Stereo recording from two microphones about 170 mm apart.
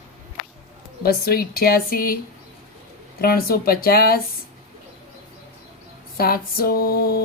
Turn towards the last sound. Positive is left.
turn(degrees=60)  # may be behind; listen again after turning